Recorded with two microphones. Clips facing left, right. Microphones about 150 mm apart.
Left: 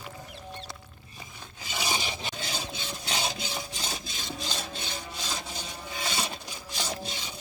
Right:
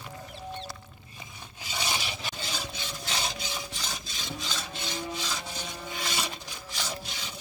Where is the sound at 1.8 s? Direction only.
15° left (ahead or behind).